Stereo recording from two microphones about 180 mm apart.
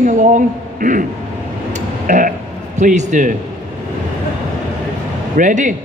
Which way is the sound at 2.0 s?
45° right (ahead or behind).